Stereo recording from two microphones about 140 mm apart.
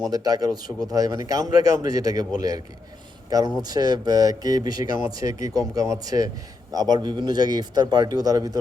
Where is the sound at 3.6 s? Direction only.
30° right (ahead or behind).